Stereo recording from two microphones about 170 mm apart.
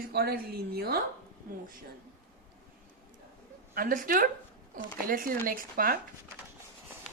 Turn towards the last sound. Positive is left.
turn(degrees=-55)  # may be behind; listen again after turning